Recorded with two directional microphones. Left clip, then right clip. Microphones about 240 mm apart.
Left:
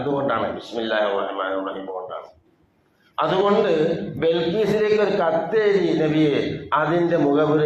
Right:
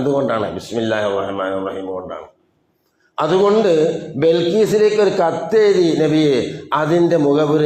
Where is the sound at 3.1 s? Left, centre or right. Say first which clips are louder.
Right 4 dB; right.